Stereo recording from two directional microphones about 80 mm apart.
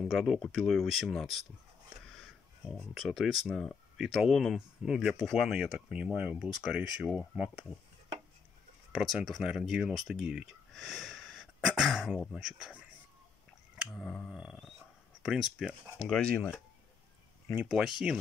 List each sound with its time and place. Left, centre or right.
0.0 s speech: centre
2.9 s speech: centre
7.2 s speech: right
8.9 s speech: centre
9.4 s speech: centre
13.9 s speech: centre
14.3 s speech: centre
16.0 s speech: centre
17.6 s speech: centre